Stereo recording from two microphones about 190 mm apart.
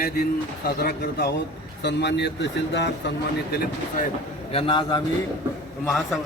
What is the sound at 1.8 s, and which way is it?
Speech, 65° left (ahead or behind).